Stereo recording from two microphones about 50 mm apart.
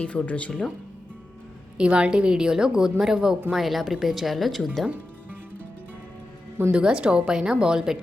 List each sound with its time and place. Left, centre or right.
0.0 s speech: left
1.8 s speech: right; by 4.9 s centre
6.7 s speech: centre